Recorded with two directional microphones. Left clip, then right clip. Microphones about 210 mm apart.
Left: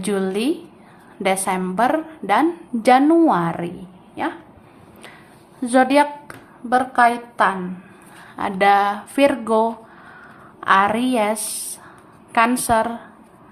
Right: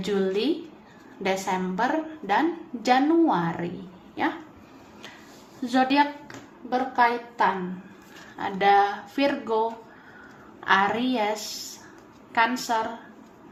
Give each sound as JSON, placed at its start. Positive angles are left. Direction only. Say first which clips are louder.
{"t": 0.0, "sound": "a woman's voice", "louder": "left 3 dB", "side_deg": 30}
{"t": 5.6, "sound": "a woman's voice", "louder": "left 7 dB", "side_deg": 25}